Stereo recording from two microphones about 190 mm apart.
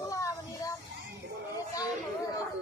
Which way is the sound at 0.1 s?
15° left (ahead or behind).